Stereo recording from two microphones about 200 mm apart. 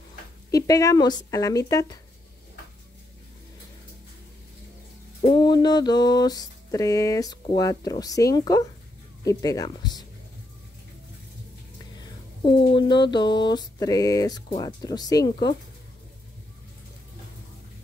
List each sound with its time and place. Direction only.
0.5 s speech: 15° left (ahead or behind)
5.2 s mantra: 25° left (ahead or behind)
9.2 s speech: 15° left (ahead or behind)
12.7 s mantra: 20° left (ahead or behind)